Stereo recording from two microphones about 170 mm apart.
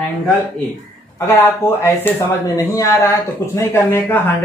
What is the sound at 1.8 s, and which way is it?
Speech, 20° left (ahead or behind).